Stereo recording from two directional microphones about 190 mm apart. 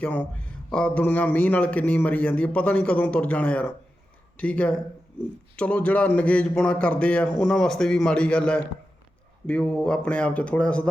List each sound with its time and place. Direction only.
0.0 s a man's voice: 5° left (ahead or behind)